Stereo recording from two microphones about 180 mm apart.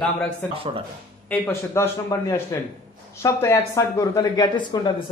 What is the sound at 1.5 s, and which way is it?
Speech, 15° left (ahead or behind).